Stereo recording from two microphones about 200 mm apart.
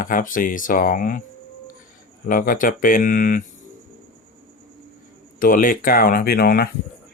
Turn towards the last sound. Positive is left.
turn(degrees=50)  # may be behind; listen again after turning